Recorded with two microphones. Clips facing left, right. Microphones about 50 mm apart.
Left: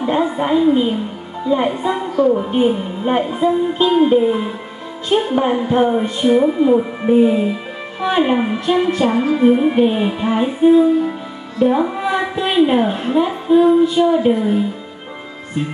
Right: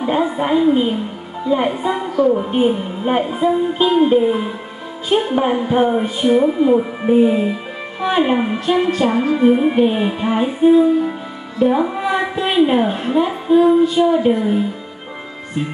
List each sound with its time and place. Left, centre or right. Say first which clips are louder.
0.0 s a woman's voice: even; centre